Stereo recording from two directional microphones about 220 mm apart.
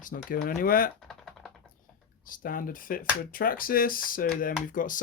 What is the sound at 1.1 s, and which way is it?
Typing, centre (ahead or behind).